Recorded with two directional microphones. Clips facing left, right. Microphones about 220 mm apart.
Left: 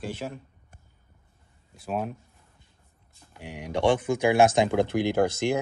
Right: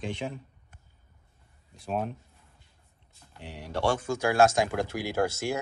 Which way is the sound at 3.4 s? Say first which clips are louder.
Left 4 dB; 15° left (ahead or behind).